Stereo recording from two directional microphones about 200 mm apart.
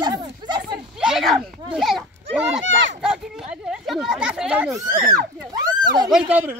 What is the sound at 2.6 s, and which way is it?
Speech, 65° right (ahead or behind).